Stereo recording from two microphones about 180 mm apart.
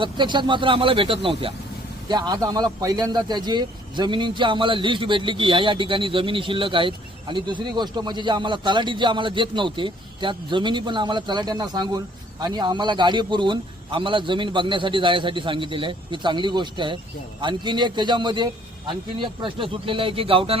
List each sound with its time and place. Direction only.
0.0 s a man's voice: 25° right (ahead or behind)